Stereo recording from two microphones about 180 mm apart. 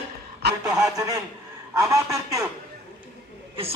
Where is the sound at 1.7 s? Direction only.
15° right (ahead or behind).